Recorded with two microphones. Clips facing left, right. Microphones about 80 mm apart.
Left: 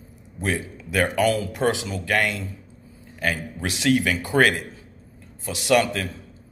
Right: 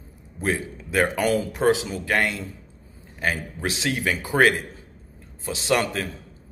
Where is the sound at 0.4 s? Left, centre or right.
Right.